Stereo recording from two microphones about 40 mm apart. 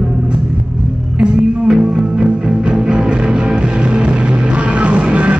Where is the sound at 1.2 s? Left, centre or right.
Right.